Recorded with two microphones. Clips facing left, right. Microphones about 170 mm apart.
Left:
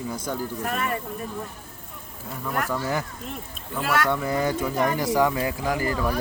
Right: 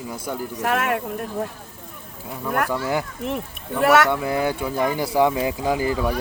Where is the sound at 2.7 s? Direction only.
15° right (ahead or behind).